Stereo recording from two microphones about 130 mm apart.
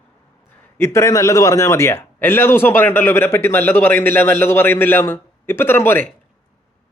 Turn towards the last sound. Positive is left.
turn(degrees=15)  # may be behind; listen again after turning